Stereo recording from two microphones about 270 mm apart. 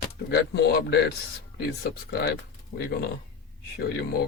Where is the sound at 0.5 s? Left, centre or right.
Left.